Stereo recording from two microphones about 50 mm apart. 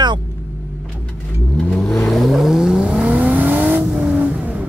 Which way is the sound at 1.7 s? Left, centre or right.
Centre.